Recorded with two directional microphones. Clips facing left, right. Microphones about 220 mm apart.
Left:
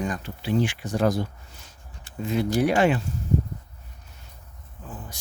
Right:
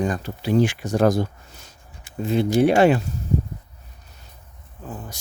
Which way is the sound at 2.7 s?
40° right (ahead or behind).